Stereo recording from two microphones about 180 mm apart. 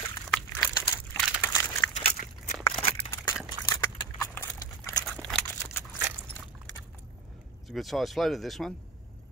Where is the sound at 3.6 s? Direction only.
15° left (ahead or behind).